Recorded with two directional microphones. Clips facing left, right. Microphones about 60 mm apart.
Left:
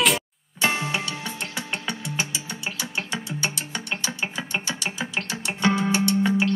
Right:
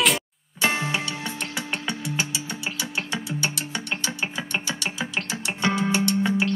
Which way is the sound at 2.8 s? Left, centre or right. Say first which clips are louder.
Even; left.